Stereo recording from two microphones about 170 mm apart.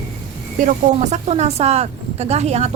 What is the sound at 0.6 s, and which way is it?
A woman's voice, 50° right (ahead or behind).